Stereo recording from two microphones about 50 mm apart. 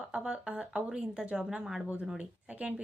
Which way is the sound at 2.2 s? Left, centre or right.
Right.